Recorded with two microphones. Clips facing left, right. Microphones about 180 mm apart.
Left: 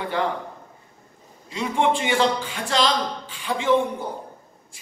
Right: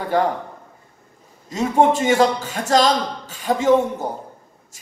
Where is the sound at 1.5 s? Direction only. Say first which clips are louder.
Right 5 dB; 45° right (ahead or behind).